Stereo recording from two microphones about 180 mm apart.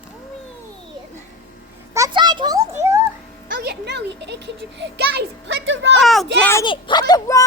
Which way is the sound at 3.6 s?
65° right (ahead or behind).